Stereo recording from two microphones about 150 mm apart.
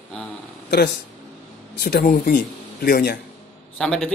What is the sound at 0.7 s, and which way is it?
A man's voice, 90° left.